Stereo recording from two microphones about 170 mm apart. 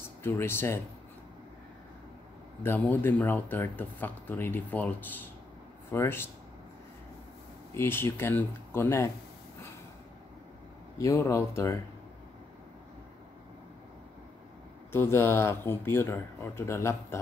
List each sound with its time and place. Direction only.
0.2 s speech: 15° left (ahead or behind)
2.6 s speech: 10° left (ahead or behind)
7.7 s speech: 15° left (ahead or behind)
11.0 s speech: 20° left (ahead or behind)
14.9 s speech: 15° left (ahead or behind)